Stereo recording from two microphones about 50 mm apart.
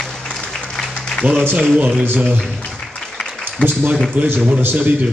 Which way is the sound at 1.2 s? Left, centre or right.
Right.